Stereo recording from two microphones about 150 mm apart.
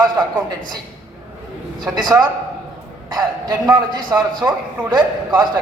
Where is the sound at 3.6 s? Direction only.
25° right (ahead or behind).